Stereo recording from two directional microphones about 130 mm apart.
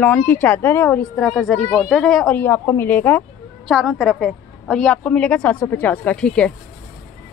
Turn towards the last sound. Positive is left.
turn(degrees=5)  # may be behind; listen again after turning